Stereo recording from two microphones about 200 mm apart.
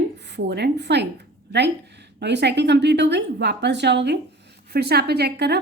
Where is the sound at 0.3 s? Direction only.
55° right (ahead or behind).